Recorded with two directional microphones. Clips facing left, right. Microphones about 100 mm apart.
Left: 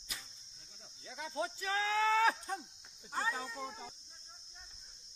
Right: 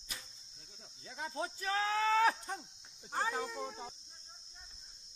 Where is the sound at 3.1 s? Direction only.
50° right (ahead or behind).